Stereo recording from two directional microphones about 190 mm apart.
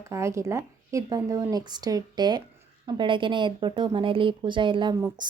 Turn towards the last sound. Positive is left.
turn(degrees=-20)  # may be behind; listen again after turning